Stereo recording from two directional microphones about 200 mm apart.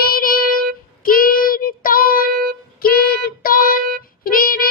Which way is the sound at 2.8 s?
50° left (ahead or behind).